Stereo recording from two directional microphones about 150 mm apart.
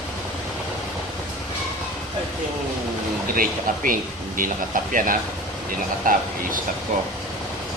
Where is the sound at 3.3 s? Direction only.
65° right (ahead or behind).